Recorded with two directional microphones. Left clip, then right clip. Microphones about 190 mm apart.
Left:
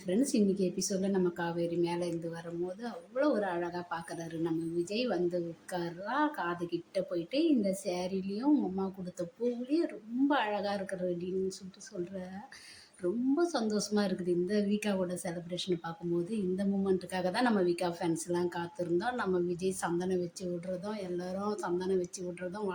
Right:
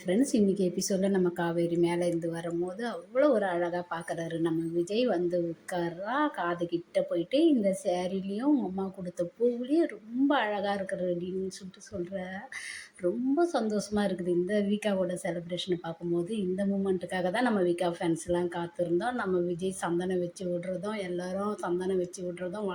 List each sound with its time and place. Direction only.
0.1 s a woman's voice: 20° right (ahead or behind)
13.0 s a woman's voice: 10° right (ahead or behind)